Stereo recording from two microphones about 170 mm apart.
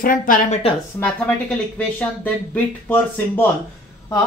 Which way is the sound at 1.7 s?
10° left (ahead or behind).